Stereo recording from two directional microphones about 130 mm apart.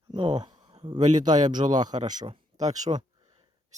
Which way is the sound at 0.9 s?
65° right (ahead or behind).